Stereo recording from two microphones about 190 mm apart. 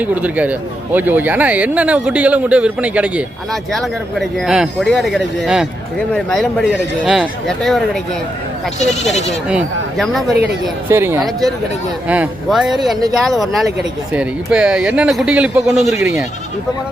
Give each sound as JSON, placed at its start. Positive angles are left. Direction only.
{"t": 0.0, "sound": "a man's voice", "side_deg": -10}
{"t": 9.1, "sound": "speech", "side_deg": 35}
{"t": 9.5, "sound": "a man's voice", "side_deg": 0}
{"t": 10.8, "sound": "speech", "side_deg": -10}
{"t": 11.2, "sound": "a man's voice", "side_deg": 0}